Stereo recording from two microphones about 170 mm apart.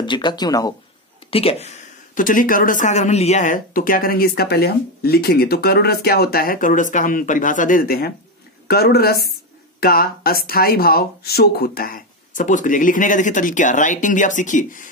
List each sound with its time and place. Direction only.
0.0 s speech: 25° left (ahead or behind)
1.3 s a woman's voice: 35° left (ahead or behind)